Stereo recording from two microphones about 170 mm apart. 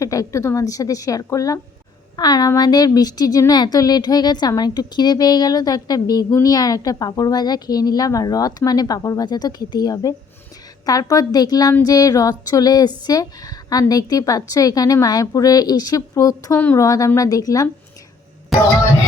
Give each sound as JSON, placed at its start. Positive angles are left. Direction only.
{"t": 0.0, "sound": "a woman's voice", "side_deg": 20}